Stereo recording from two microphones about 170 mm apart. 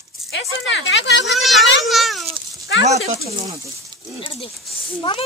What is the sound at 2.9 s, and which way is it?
Speech, 40° right (ahead or behind).